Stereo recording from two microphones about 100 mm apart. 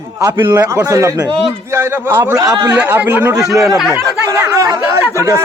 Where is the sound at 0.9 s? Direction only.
30° right (ahead or behind).